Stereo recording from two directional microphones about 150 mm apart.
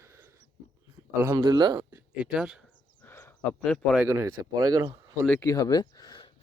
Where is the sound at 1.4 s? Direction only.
30° right (ahead or behind).